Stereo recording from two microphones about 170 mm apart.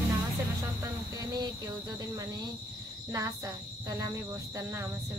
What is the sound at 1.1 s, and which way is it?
Speech, 20° right (ahead or behind).